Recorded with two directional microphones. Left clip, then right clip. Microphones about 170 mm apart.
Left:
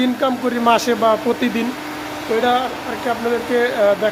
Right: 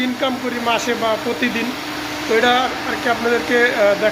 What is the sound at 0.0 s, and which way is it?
Speech, 45° left (ahead or behind).